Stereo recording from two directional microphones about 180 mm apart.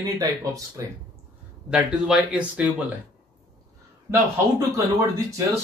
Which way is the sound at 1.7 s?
5° right (ahead or behind).